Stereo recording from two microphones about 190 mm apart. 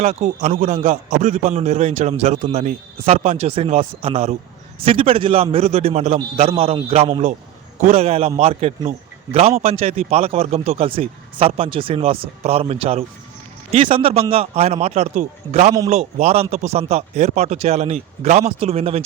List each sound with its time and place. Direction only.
0.0 s a man's voice: 35° right (ahead or behind)